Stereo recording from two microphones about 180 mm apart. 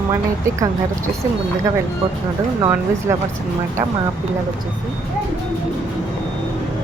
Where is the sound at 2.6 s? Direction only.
15° right (ahead or behind).